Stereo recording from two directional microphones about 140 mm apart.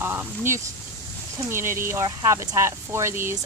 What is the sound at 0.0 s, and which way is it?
Speech, 15° right (ahead or behind).